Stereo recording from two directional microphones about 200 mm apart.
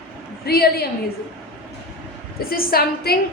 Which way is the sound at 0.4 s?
50° left (ahead or behind).